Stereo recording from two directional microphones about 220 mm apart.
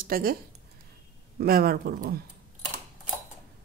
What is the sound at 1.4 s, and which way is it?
Speech, 40° right (ahead or behind).